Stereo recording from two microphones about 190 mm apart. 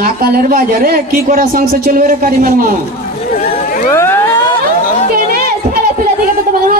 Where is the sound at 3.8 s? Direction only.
15° left (ahead or behind).